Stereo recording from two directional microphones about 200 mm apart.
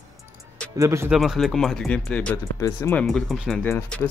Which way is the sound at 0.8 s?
15° right (ahead or behind).